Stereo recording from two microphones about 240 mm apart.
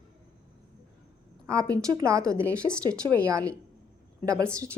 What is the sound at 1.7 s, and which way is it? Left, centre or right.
A woman's voice, centre.